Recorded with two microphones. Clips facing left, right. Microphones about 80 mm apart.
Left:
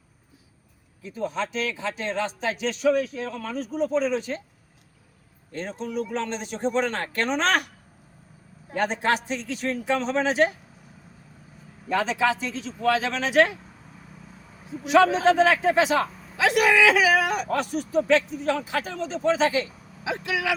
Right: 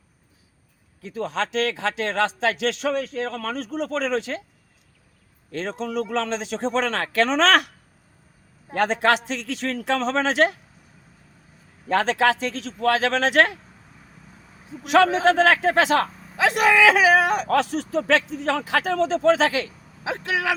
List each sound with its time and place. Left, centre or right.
1.0 s speech: right
5.5 s speech: right
8.7 s a man's voice: right
11.9 s a man's voice: right
14.8 s a man's voice: right
16.4 s speech: right
17.5 s speech: right
20.1 s speech: right